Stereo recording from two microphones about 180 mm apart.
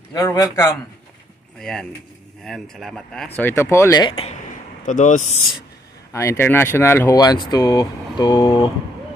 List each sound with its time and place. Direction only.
0.1 s speech: 20° left (ahead or behind)
1.6 s speech: 5° left (ahead or behind); by 4.1 s 20° left (ahead or behind)
4.1 s speech: 30° left (ahead or behind)
4.8 s speech: 45° left (ahead or behind)
6.1 s speech: 15° left (ahead or behind)